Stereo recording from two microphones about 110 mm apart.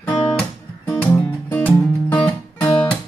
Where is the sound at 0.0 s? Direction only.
15° left (ahead or behind).